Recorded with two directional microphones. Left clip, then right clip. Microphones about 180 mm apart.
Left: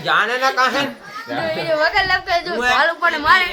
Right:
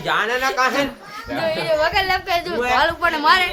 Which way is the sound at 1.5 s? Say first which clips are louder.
Left 1 dB; 45° right (ahead or behind).